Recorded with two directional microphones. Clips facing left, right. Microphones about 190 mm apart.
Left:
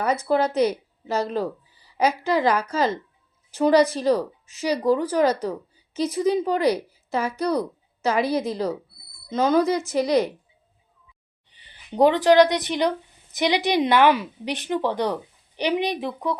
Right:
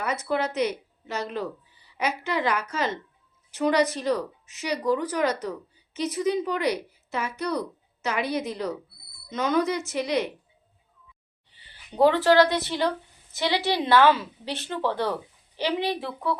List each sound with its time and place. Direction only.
0.0 s speech: 35° left (ahead or behind)
11.4 s a woman's voice: 20° left (ahead or behind)